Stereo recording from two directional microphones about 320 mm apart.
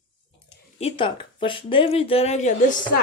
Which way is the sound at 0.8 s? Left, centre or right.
Centre.